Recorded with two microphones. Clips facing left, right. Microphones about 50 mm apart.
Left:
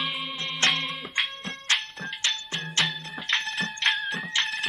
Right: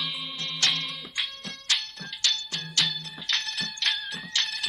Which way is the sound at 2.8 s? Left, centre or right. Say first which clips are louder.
Left 2 dB; left.